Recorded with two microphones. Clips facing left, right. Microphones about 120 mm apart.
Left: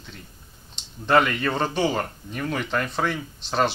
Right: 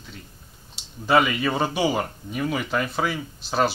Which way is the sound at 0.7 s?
5° right (ahead or behind).